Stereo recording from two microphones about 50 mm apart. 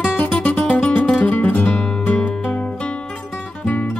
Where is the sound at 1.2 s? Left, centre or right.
Left.